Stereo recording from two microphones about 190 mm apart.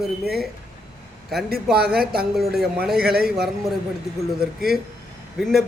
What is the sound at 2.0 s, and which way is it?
Speech, 55° right (ahead or behind).